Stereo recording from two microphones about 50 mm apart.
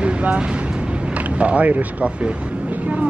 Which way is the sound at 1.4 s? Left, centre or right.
Right.